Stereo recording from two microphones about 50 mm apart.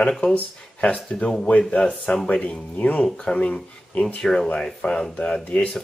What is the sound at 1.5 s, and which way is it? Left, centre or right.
Speech, left.